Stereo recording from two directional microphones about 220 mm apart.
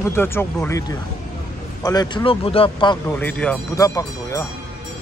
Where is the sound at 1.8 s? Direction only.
20° left (ahead or behind).